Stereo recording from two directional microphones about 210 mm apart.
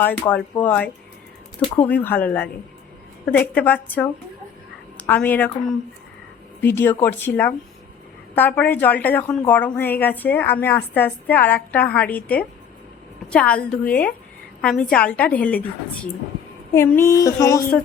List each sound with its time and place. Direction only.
0.0 s a woman's voice: 10° left (ahead or behind)
1.6 s speech: 20° left (ahead or behind)
1.9 s a woman's voice: 10° left (ahead or behind)
6.6 s a woman's voice: 10° left (ahead or behind)